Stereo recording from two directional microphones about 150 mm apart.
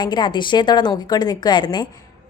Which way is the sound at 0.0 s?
30° left (ahead or behind).